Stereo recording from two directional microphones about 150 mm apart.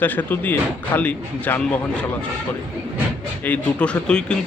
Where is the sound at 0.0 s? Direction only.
10° left (ahead or behind).